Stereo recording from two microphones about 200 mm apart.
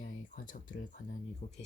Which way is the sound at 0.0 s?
45° left (ahead or behind).